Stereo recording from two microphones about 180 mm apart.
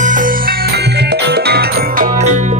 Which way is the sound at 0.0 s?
45° right (ahead or behind).